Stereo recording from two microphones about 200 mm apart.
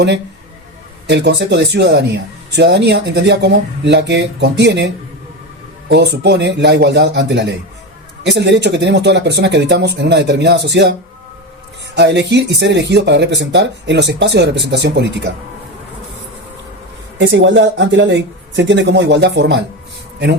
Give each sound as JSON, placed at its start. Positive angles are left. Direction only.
{"t": 1.0, "sound": "speech", "side_deg": -60}
{"t": 5.9, "sound": "speech", "side_deg": -55}
{"t": 11.9, "sound": "speech", "side_deg": -60}
{"t": 17.2, "sound": "speech", "side_deg": -65}